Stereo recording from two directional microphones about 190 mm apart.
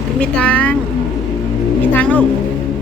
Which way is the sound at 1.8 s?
10° left (ahead or behind).